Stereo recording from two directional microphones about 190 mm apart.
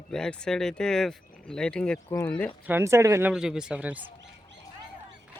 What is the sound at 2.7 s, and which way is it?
Speech, 15° right (ahead or behind).